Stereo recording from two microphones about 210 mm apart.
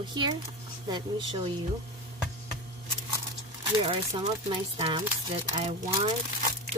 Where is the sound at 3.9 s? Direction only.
25° right (ahead or behind).